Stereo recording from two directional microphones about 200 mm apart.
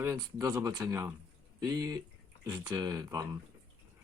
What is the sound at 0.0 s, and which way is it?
Speech, 15° right (ahead or behind).